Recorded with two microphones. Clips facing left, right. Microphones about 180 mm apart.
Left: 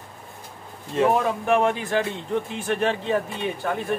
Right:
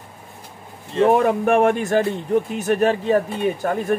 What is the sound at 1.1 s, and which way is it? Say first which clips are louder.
A man's voice: right 5 dB; 60° right (ahead or behind).